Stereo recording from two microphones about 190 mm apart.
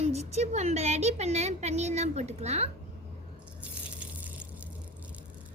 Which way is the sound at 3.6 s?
5° right (ahead or behind).